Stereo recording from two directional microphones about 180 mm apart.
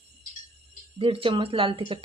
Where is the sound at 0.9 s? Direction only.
30° right (ahead or behind).